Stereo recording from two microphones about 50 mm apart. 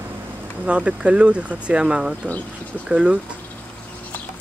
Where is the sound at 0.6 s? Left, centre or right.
Right.